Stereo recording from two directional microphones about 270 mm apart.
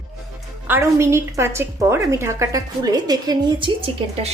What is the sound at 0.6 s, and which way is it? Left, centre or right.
A woman's voice, centre.